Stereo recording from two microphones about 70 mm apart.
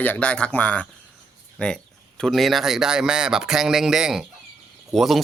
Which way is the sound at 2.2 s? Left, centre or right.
Centre.